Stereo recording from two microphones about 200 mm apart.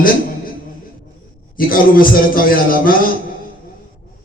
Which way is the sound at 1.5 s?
45° left (ahead or behind).